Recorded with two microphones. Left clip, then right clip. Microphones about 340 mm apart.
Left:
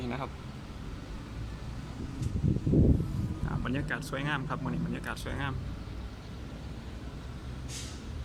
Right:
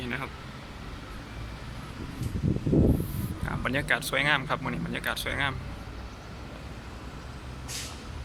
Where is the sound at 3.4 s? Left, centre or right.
Centre.